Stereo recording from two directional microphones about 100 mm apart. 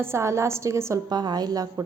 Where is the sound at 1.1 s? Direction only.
45° right (ahead or behind).